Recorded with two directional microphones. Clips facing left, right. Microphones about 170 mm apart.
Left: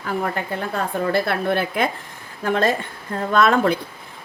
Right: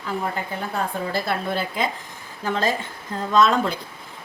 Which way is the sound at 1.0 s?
60° left (ahead or behind).